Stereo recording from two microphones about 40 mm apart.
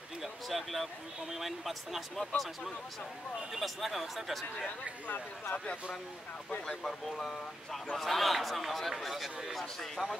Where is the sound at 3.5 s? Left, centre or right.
Centre.